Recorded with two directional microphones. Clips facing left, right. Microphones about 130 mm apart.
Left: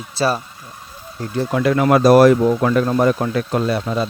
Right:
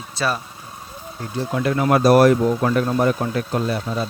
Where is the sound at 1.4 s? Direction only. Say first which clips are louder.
Left 4 dB; 90° left.